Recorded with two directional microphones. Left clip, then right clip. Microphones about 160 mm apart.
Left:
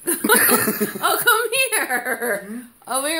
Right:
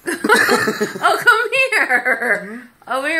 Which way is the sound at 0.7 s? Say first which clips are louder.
Right 5 dB; centre (ahead or behind).